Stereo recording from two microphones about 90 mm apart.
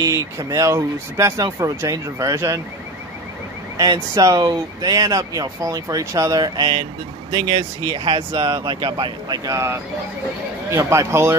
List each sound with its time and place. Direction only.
0.0 s speech: 45° right (ahead or behind)
3.7 s speech: 45° right (ahead or behind)
7.3 s speech: 60° right (ahead or behind)
10.7 s speech: 30° right (ahead or behind)